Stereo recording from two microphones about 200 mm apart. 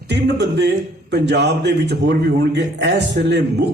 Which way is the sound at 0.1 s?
60° right (ahead or behind).